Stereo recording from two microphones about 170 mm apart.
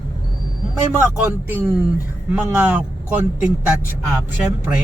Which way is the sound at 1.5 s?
10° right (ahead or behind).